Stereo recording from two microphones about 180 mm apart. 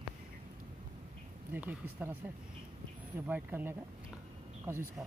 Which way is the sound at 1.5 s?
10° right (ahead or behind).